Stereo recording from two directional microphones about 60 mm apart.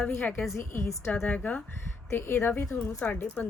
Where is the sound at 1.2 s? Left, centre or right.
Left.